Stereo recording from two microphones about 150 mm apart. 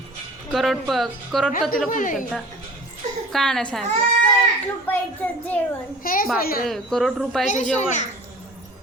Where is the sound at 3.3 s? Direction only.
5° left (ahead or behind).